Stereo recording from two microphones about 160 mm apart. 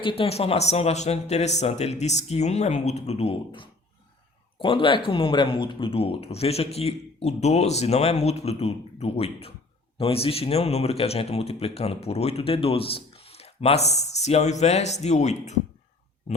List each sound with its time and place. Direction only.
0.0 s a man's voice: 35° left (ahead or behind)